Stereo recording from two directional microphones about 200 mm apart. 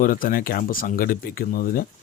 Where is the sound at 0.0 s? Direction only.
45° left (ahead or behind).